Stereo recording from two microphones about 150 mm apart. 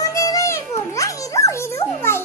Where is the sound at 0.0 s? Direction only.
20° left (ahead or behind).